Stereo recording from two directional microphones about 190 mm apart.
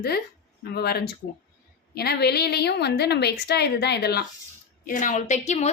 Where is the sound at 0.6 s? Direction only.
55° left (ahead or behind).